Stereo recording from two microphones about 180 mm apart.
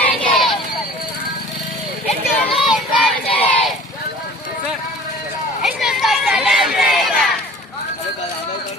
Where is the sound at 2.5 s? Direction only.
Centre (ahead or behind).